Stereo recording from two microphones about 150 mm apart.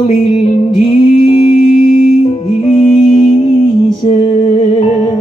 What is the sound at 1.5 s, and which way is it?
Music, 65° left (ahead or behind).